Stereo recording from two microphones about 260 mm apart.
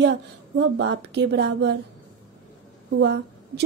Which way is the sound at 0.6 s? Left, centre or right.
Right.